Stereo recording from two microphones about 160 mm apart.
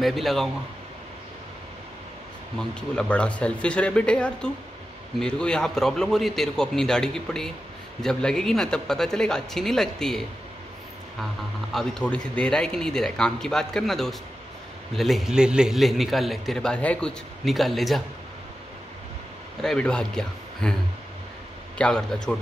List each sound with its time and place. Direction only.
0.0 s a man's voice: centre (ahead or behind)
2.7 s a man's voice: 5° left (ahead or behind)
11.7 s a man's voice: centre (ahead or behind)
19.6 s a man's voice: 5° left (ahead or behind)
21.7 s a man's voice: 5° left (ahead or behind)